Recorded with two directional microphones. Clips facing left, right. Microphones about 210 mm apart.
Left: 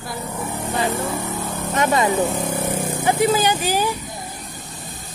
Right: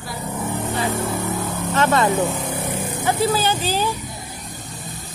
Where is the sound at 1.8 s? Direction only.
15° left (ahead or behind).